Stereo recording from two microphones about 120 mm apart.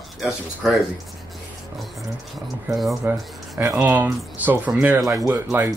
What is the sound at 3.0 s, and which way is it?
Speech, 15° right (ahead or behind).